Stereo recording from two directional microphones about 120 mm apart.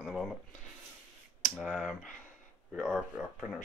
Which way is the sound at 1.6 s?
5° right (ahead or behind).